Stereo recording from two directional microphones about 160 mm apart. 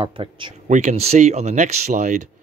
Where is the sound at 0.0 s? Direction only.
30° right (ahead or behind).